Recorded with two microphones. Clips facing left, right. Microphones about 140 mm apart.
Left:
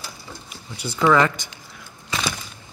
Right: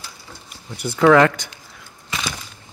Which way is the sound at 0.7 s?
65° right (ahead or behind).